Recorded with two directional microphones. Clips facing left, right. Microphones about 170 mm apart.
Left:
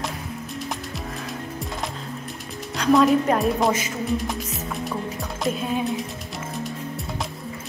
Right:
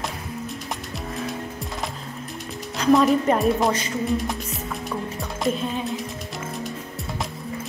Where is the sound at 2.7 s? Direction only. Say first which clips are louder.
Even; centre (ahead or behind).